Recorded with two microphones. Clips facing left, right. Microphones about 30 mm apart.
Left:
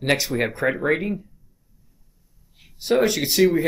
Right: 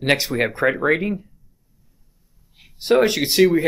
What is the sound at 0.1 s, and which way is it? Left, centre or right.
Speech, centre.